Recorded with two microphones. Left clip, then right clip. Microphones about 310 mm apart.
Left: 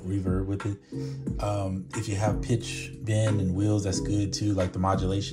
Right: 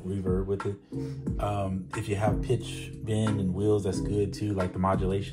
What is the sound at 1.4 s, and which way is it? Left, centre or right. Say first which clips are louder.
Music: even; centre.